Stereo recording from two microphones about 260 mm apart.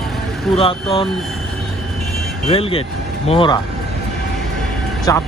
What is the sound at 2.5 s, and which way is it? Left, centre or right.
Speech, left.